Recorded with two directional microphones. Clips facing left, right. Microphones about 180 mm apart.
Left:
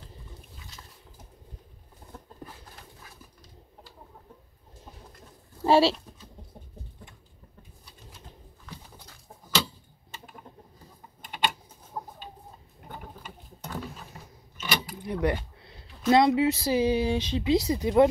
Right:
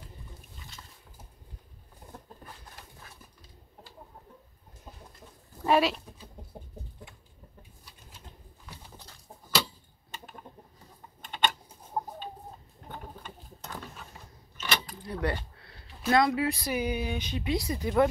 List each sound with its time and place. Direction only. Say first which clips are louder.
5.6 s speech: left 4 dB; 30° left (ahead or behind)
11.2 s typing: even; 10° left (ahead or behind)
12.8 s a sound: even; 5° left (ahead or behind)
14.1 s mechanisms: left 3 dB; 5° left (ahead or behind)
15.0 s a sound: left 8 dB; 15° left (ahead or behind)
16.1 s speech: left 4 dB; 25° left (ahead or behind)